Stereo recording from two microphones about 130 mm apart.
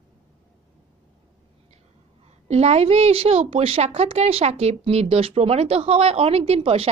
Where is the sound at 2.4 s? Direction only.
55° right (ahead or behind).